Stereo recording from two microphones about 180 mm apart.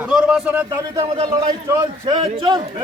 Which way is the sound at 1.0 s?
30° right (ahead or behind).